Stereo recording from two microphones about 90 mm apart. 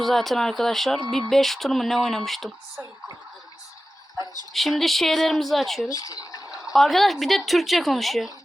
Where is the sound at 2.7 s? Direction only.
40° right (ahead or behind).